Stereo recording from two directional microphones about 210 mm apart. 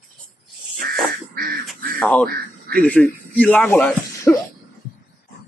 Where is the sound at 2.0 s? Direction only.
5° left (ahead or behind).